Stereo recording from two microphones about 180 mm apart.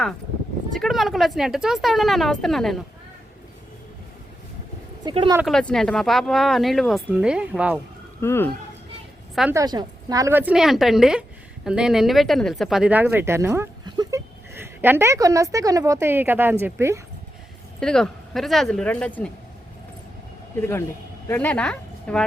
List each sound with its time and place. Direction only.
0.7 s speech: centre (ahead or behind)
5.0 s speech: 30° right (ahead or behind)
5.5 s speech: centre (ahead or behind)
8.2 s speech: 15° left (ahead or behind)
9.5 s a woman's voice: 20° right (ahead or behind)
17.7 s speech: 5° left (ahead or behind)
20.6 s speech: 15° left (ahead or behind)